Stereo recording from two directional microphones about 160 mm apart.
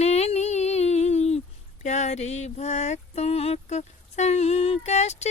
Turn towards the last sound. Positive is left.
turn(degrees=45)  # may be behind; listen again after turning